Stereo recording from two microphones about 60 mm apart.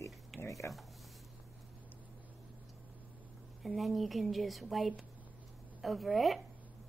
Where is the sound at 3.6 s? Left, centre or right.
Centre.